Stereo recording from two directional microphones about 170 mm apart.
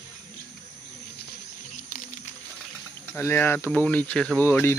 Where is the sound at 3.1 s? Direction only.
15° left (ahead or behind).